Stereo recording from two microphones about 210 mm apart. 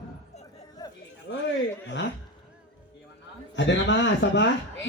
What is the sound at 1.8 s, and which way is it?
Speech, 55° left (ahead or behind).